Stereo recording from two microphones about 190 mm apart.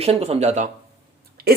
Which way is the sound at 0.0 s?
30° right (ahead or behind).